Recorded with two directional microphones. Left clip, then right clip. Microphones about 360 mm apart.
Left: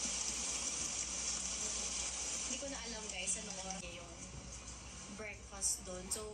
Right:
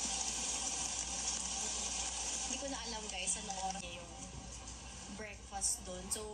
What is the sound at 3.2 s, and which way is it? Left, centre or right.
Speech, centre.